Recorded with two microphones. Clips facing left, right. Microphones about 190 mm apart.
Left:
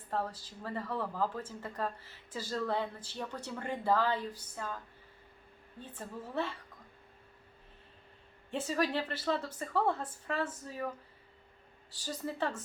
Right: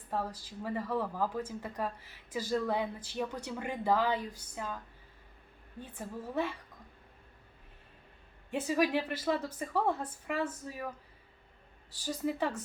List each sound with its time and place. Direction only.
0.1 s speech: 15° right (ahead or behind)
6.0 s speech: 15° right (ahead or behind)
8.4 s speech: 15° right (ahead or behind)
12.0 s speech: 15° right (ahead or behind)